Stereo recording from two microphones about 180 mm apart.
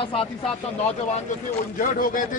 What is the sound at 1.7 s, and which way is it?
Speech, 50° left (ahead or behind).